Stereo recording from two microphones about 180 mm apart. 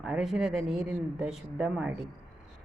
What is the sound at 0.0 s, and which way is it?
Speech, centre (ahead or behind).